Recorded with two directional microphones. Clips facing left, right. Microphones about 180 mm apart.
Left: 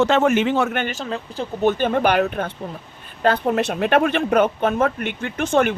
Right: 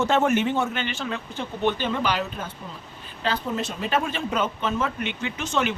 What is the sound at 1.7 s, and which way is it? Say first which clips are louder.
Speech: left 7 dB; 55° left (ahead or behind).